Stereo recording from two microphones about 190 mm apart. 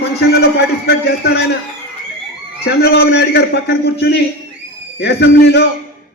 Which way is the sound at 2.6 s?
60° left (ahead or behind).